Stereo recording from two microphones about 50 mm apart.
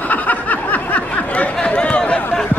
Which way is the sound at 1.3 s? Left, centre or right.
Left.